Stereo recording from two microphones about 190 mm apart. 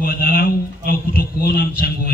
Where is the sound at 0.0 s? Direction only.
50° left (ahead or behind).